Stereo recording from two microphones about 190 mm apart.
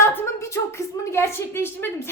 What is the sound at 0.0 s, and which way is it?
A woman's voice, 15° left (ahead or behind).